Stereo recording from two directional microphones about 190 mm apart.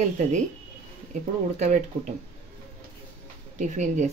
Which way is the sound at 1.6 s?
40° right (ahead or behind).